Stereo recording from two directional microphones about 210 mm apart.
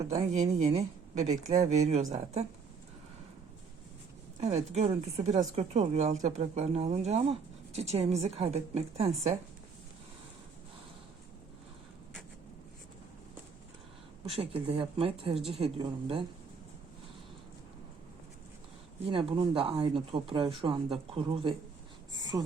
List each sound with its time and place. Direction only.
0.3 s speech: 30° right (ahead or behind)
4.4 s speech: 30° right (ahead or behind)
14.3 s speech: 25° right (ahead or behind)
19.0 s speech: 25° right (ahead or behind)